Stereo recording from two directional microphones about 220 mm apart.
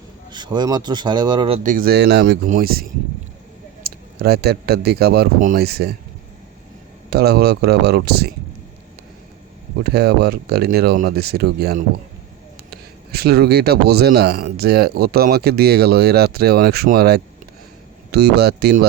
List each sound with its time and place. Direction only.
0.3 s speech: 20° right (ahead or behind)
1.6 s a man's voice: 40° right (ahead or behind)
3.8 s a man's voice: 45° right (ahead or behind)
7.1 s a man's voice: 45° right (ahead or behind)
9.8 s a man's voice: 45° right (ahead or behind)